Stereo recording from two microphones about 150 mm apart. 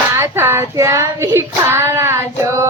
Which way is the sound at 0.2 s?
15° right (ahead or behind).